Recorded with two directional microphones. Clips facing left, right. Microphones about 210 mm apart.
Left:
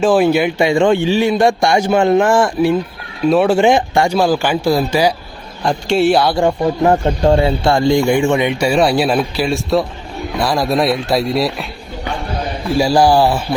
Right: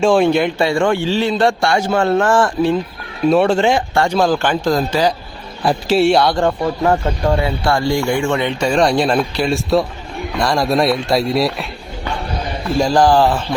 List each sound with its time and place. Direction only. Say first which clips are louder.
0.0 s a man's voice: left 1 dB; 5° left (ahead or behind)
0.7 s a man's voice: left 3 dB; 20° left (ahead or behind); by 3.6 s centre (ahead or behind)
3.6 s speech: left 3 dB; 15° left (ahead or behind)
5.6 s a man's voice: even; centre (ahead or behind)
6.8 s a man's voice: left 4 dB; 25° left (ahead or behind); by 11.6 s centre (ahead or behind)
12.8 s speech: left 1 dB; 10° left (ahead or behind)